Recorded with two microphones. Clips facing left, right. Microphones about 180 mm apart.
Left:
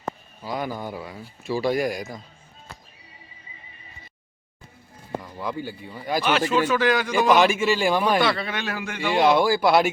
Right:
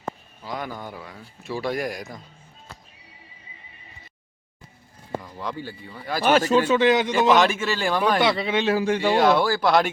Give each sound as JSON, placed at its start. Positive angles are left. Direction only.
{"t": 0.4, "sound": "speech", "side_deg": 5}
{"t": 5.2, "sound": "speech", "side_deg": 5}
{"t": 6.2, "sound": "speech", "side_deg": -45}
{"t": 6.6, "sound": "speech", "side_deg": -25}
{"t": 7.3, "sound": "speech", "side_deg": 10}
{"t": 8.2, "sound": "speech", "side_deg": -20}
{"t": 9.1, "sound": "speech", "side_deg": 15}